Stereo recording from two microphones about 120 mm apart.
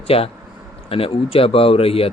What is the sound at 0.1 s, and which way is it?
Speech, 55° left (ahead or behind).